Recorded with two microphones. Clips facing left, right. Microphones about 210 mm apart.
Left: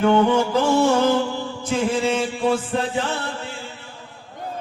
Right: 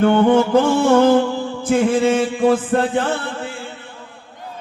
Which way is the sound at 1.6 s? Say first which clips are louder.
Right 6 dB; 55° right (ahead or behind).